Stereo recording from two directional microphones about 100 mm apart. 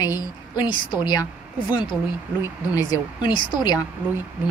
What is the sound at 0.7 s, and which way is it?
Speech, 55° left (ahead or behind).